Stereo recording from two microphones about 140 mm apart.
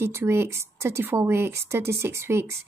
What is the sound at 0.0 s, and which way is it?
A woman's voice, 15° right (ahead or behind).